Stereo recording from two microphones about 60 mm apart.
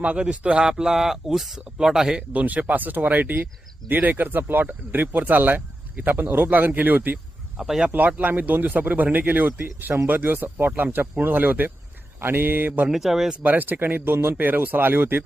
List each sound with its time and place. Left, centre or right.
0.0 s speech: centre
2.3 s speech: right
7.5 s speech: centre
7.9 s speech: right
12.9 s speech: centre
13.4 s speech: right